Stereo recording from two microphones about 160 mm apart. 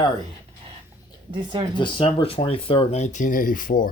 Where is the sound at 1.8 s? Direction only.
35° left (ahead or behind).